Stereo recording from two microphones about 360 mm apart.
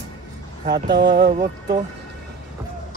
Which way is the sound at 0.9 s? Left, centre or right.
Right.